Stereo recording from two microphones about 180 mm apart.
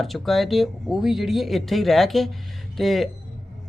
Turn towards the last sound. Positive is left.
turn(degrees=0)  # may be behind; listen again after turning